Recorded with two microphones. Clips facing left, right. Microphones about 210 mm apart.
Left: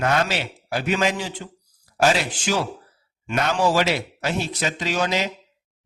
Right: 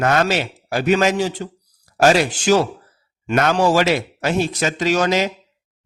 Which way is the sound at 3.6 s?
45° right (ahead or behind).